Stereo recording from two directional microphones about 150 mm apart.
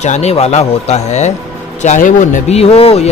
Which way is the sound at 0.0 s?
50° left (ahead or behind).